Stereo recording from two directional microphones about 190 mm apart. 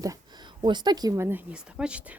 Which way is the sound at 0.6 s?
25° right (ahead or behind).